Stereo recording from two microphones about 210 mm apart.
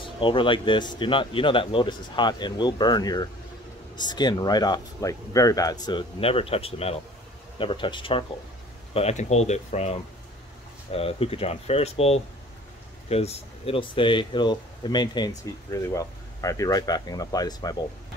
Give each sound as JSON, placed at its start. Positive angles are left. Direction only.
{"t": 0.2, "sound": "speech", "side_deg": 25}